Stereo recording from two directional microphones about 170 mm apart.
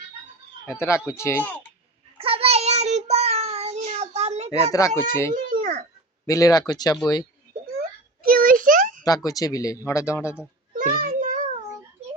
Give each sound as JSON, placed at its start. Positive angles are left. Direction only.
{"t": 0.7, "sound": "speech", "side_deg": 15}
{"t": 2.1, "sound": "child singing", "side_deg": -35}
{"t": 4.7, "sound": "speech", "side_deg": 15}
{"t": 5.3, "sound": "a sound", "side_deg": -50}
{"t": 6.2, "sound": "speech", "side_deg": 20}
{"t": 8.2, "sound": "a sound", "side_deg": -60}
{"t": 9.0, "sound": "speech", "side_deg": 20}
{"t": 10.8, "sound": "child singing", "side_deg": -55}